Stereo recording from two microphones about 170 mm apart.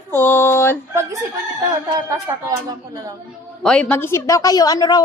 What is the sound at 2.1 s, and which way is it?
Speech, 20° right (ahead or behind).